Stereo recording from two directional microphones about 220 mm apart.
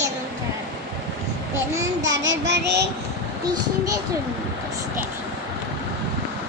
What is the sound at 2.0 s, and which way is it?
Child singing, 60° right (ahead or behind).